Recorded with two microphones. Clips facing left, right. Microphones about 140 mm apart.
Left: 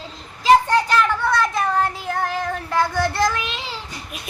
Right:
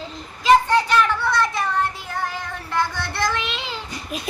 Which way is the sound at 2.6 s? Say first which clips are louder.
Left 3 dB; 45° left (ahead or behind).